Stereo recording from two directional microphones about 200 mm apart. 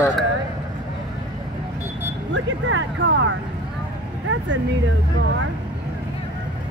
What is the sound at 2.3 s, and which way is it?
Vehicle, 70° right (ahead or behind).